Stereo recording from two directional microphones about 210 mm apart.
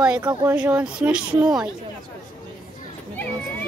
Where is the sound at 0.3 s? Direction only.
15° right (ahead or behind).